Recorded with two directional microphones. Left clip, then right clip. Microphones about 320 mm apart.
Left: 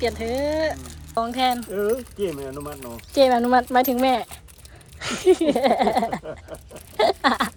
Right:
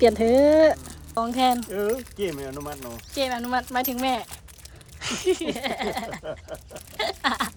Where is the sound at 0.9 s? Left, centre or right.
Centre.